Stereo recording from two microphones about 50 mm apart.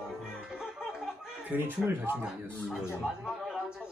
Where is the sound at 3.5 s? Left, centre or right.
Centre.